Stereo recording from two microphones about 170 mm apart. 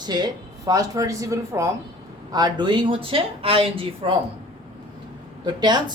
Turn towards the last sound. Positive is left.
turn(degrees=-25)  # may be behind; listen again after turning